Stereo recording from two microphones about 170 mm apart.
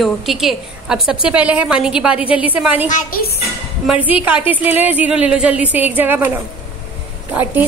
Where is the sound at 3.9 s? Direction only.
5° right (ahead or behind).